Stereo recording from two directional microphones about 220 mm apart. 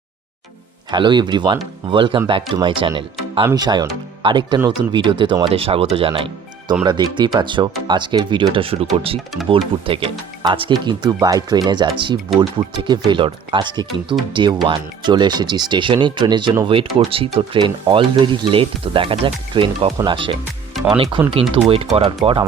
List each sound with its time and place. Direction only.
0.9 s speech: 20° right (ahead or behind)
9.1 s speech: centre (ahead or behind)
9.5 s speech: 25° right (ahead or behind)